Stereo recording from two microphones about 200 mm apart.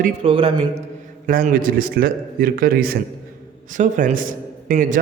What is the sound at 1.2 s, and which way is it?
A man's voice, 45° right (ahead or behind).